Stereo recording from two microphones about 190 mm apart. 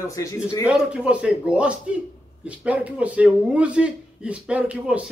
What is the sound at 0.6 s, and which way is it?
A man's voice, 5° right (ahead or behind).